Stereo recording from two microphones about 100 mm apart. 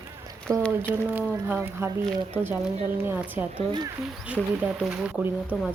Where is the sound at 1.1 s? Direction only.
20° right (ahead or behind).